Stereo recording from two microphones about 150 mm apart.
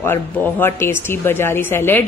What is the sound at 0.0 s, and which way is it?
A man's voice, 15° left (ahead or behind).